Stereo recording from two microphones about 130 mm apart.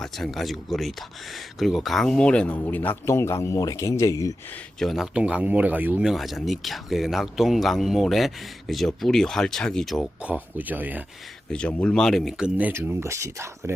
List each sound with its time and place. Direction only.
0.0 s speech: centre (ahead or behind); by 4.4 s 25° left (ahead or behind)
4.8 s speech: centre (ahead or behind)
6.1 s speech: centre (ahead or behind)
10.2 s speech: 10° right (ahead or behind)
11.5 s speech: 10° left (ahead or behind)
12.5 s speech: 10° right (ahead or behind)